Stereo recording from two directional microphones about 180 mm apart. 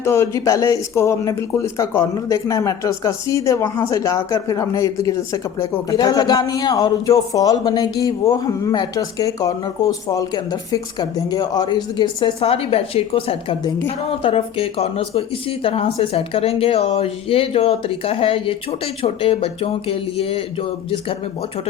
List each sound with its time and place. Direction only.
0.0 s speech: 15° left (ahead or behind); by 20.7 s 30° left (ahead or behind)